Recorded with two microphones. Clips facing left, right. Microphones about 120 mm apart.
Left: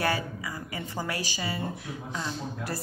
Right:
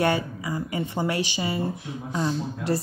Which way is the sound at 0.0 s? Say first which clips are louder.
Right 5 dB; 25° right (ahead or behind).